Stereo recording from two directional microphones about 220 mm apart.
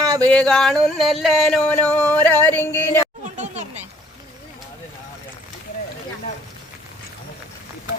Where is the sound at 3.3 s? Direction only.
30° right (ahead or behind).